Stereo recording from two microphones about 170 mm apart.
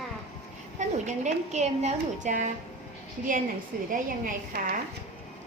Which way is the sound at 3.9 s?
50° right (ahead or behind).